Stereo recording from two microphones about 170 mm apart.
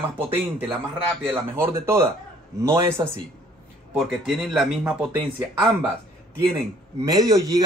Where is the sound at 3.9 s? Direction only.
Centre (ahead or behind).